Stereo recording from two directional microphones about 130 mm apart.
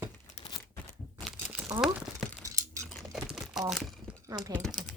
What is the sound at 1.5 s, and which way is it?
Crumpling, 15° right (ahead or behind).